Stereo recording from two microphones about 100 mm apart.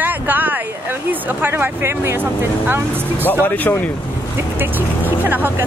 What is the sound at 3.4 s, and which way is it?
Speech, 20° left (ahead or behind).